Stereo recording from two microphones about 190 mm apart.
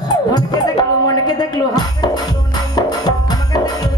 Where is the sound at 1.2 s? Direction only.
20° left (ahead or behind).